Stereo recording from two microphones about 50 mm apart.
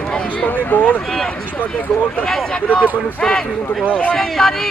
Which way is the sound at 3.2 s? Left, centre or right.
Centre.